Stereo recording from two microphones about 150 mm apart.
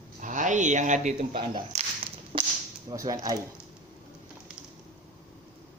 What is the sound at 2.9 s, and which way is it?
Speech, 25° right (ahead or behind).